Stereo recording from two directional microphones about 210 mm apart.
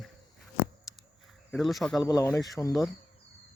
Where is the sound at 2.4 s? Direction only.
Centre (ahead or behind).